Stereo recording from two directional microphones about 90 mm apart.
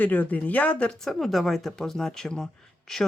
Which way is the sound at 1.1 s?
Centre (ahead or behind).